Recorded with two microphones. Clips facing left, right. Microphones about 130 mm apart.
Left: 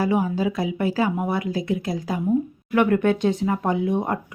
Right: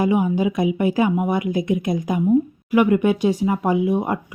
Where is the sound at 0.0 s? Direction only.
15° right (ahead or behind).